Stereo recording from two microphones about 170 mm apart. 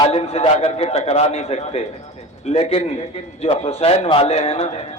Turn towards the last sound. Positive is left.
turn(degrees=40)  # may be behind; listen again after turning